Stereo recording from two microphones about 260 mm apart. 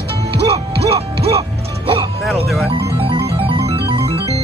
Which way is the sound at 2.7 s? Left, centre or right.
Centre.